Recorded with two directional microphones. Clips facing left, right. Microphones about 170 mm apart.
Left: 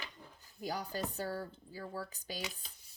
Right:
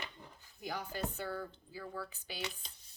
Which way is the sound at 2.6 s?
Centre (ahead or behind).